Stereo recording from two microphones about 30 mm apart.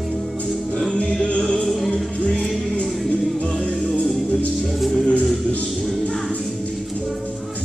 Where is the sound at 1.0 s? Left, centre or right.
Left.